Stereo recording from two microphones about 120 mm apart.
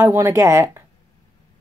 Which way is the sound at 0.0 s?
25° right (ahead or behind).